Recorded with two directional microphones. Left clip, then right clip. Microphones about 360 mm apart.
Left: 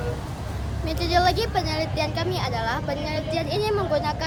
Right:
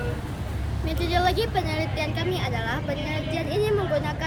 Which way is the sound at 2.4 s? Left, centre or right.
Centre.